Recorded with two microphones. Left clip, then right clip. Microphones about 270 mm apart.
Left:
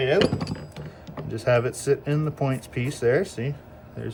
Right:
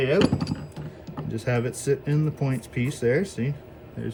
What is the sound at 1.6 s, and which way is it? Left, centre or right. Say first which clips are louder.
Speech: left 2 dB; centre.